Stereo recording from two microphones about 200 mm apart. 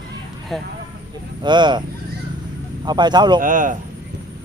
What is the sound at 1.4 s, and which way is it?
Speech, 20° right (ahead or behind).